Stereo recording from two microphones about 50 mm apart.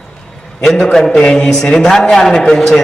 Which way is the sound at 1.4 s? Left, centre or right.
Centre.